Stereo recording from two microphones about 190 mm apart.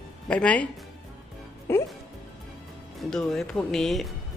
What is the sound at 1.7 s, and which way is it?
Speech, 15° left (ahead or behind).